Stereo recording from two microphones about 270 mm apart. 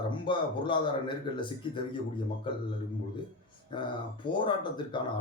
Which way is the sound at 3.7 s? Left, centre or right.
Centre.